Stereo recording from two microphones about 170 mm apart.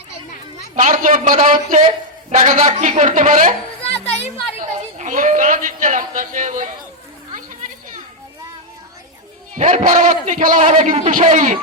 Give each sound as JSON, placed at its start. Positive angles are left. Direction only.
{"t": 0.8, "sound": "a man's voice", "side_deg": -50}
{"t": 3.8, "sound": "music", "side_deg": 35}
{"t": 4.9, "sound": "a man's voice", "side_deg": -50}
{"t": 9.6, "sound": "a man's voice", "side_deg": -45}